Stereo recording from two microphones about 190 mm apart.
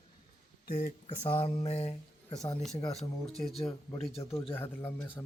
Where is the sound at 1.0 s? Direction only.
30° left (ahead or behind).